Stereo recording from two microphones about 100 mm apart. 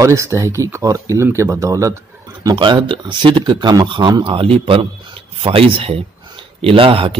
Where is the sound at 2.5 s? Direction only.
55° right (ahead or behind).